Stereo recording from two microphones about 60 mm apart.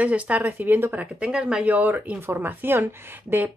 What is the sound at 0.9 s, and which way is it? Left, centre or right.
Speech, centre.